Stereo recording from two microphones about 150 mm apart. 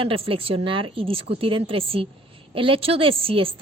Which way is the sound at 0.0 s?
40° right (ahead or behind).